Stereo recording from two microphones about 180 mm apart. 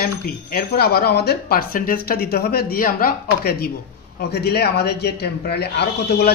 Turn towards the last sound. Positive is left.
turn(degrees=65)  # may be behind; listen again after turning